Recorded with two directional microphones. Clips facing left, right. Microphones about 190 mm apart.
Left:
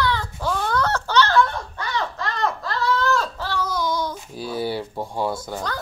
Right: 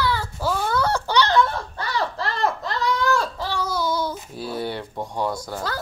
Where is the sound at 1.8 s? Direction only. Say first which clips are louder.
Right 1 dB; 35° right (ahead or behind).